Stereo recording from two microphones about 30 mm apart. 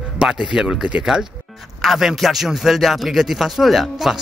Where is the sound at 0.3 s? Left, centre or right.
Right.